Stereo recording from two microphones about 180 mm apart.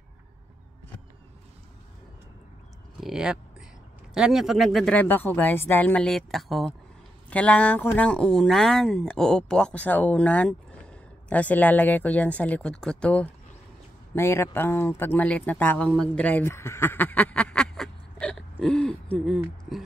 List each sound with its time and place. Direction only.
3.0 s speech: 5° right (ahead or behind)